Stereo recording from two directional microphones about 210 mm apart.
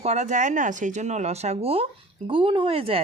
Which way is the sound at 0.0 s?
35° right (ahead or behind).